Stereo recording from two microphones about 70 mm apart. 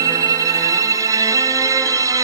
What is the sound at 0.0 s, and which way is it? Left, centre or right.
Music, right.